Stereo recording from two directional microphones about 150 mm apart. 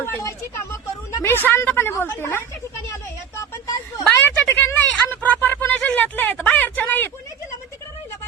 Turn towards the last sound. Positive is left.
turn(degrees=10)  # may be behind; listen again after turning